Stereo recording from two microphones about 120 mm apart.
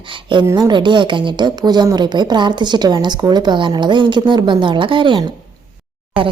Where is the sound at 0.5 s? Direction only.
40° right (ahead or behind).